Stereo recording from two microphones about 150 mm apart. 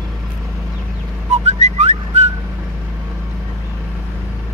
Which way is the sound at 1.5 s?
45° right (ahead or behind).